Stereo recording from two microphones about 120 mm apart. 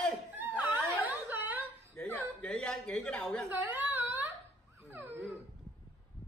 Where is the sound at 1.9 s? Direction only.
10° left (ahead or behind).